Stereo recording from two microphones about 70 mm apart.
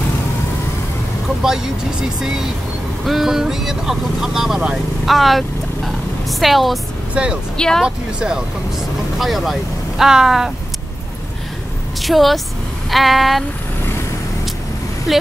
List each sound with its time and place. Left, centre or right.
1.4 s speech: centre
7.2 s speech: centre
7.5 s speech: centre
7.8 s speech: centre
12.0 s a woman's voice: centre